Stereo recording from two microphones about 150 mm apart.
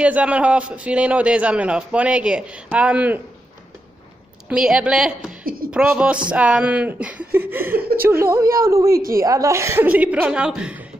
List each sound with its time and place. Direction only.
0.0 s a man's voice: 10° right (ahead or behind)
4.5 s a woman's voice: 5° right (ahead or behind)
5.4 s speech: 75° right (ahead or behind)
5.7 s a man's voice: 5° right (ahead or behind)